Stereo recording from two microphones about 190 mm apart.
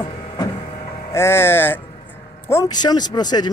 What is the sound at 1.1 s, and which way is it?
Speech, 15° left (ahead or behind).